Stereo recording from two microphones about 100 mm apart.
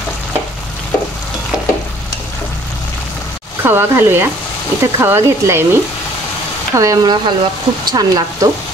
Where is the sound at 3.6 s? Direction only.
20° right (ahead or behind).